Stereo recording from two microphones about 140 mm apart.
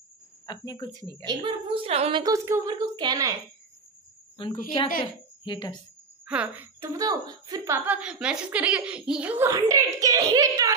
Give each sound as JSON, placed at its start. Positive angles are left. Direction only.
{"t": 0.5, "sound": "speech", "side_deg": 30}
{"t": 1.2, "sound": "a woman's voice", "side_deg": -35}
{"t": 2.1, "sound": "speech", "side_deg": -25}
{"t": 4.4, "sound": "a woman's voice", "side_deg": 35}
{"t": 6.2, "sound": "speech", "side_deg": -10}
{"t": 9.5, "sound": "speech", "side_deg": -25}